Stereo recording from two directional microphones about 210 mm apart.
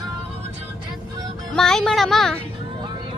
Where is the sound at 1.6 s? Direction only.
Centre (ahead or behind).